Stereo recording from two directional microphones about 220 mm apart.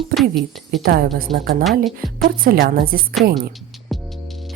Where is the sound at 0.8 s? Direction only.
40° right (ahead or behind).